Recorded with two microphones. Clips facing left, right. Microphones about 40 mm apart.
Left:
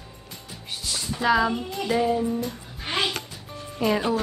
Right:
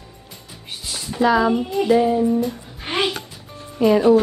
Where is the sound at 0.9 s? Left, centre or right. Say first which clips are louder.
Right 4 dB; centre.